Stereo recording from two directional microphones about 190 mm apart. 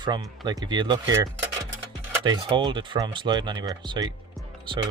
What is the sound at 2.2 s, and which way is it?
Speech, 25° right (ahead or behind).